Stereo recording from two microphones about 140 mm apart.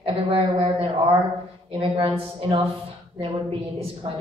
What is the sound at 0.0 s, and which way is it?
A woman's voice, 40° right (ahead or behind).